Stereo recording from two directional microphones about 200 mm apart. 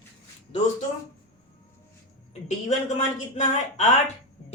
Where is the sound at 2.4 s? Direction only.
35° left (ahead or behind).